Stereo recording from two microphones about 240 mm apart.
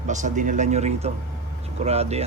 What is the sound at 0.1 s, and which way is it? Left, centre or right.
A man's voice, right.